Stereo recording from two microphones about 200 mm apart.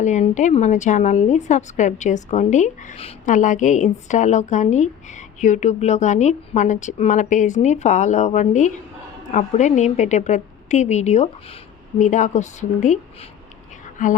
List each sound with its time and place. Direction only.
0.0 s a woman's voice: 35° left (ahead or behind)